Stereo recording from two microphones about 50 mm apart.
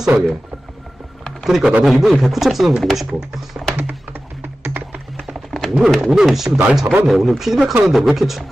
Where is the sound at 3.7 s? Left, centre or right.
Right.